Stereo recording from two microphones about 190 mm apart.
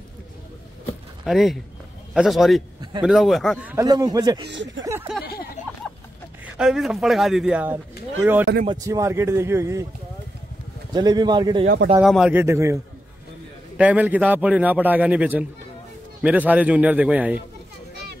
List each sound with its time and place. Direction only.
1.2 s a man's voice: centre (ahead or behind)
3.8 s speech: 20° right (ahead or behind)
4.5 s speech: 70° right (ahead or behind)
6.4 s a man's voice: 5° right (ahead or behind)
10.9 s speech: 20° right (ahead or behind)
12.0 s a man's voice: 5° right (ahead or behind)
13.7 s a man's voice: 5° right (ahead or behind)